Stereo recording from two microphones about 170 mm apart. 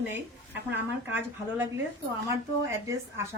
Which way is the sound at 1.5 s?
15° right (ahead or behind).